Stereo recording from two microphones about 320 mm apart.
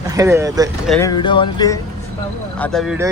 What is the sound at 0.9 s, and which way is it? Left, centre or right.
Music, centre.